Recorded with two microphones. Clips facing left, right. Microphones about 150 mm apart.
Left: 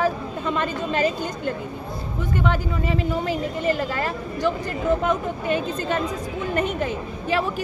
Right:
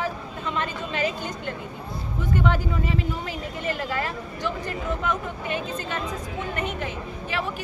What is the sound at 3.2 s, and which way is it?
Speech, 35° left (ahead or behind).